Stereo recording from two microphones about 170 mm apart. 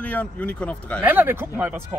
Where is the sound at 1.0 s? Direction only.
10° right (ahead or behind).